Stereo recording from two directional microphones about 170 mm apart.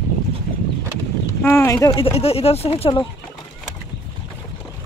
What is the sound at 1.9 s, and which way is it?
Speech, 35° left (ahead or behind).